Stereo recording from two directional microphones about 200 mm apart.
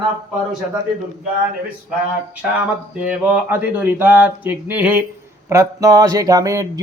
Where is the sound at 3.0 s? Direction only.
5° right (ahead or behind).